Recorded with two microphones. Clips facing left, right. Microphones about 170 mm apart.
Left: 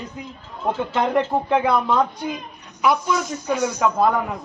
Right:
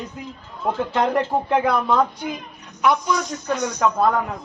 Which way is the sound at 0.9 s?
Centre (ahead or behind).